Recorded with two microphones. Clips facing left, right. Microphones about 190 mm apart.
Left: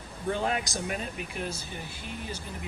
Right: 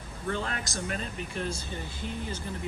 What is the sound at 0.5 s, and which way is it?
Speech, 5° left (ahead or behind).